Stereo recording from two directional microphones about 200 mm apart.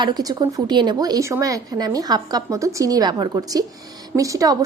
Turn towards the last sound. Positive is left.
turn(degrees=-15)  # may be behind; listen again after turning